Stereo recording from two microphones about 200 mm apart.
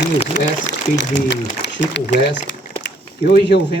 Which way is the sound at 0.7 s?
60° left (ahead or behind).